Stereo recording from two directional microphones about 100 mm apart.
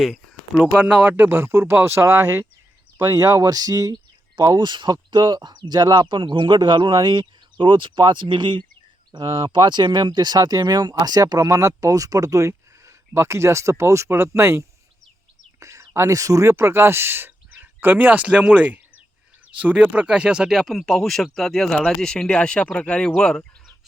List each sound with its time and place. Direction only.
0.0 s speech: 5° right (ahead or behind); by 3.9 s 40° right (ahead or behind)
4.5 s speech: 50° right (ahead or behind); by 14.6 s 25° right (ahead or behind)
15.6 s speech: 30° right (ahead or behind); by 23.5 s 5° left (ahead or behind)